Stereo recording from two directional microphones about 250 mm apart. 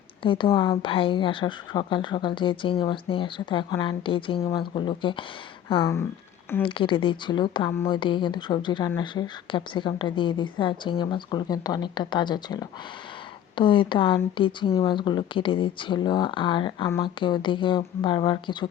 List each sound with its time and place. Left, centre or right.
0.2 s speech: centre